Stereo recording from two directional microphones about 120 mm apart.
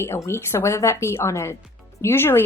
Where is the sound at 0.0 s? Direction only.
20° left (ahead or behind).